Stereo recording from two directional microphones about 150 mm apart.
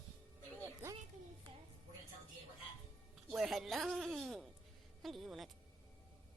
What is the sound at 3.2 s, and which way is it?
Music, centre (ahead or behind).